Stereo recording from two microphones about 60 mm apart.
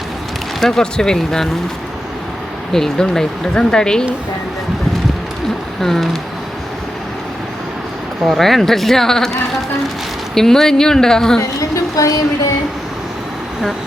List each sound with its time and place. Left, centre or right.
0.6 s speech: centre
2.7 s speech: centre
5.8 s speech: centre
8.3 s speech: centre
11.3 s a woman's voice: left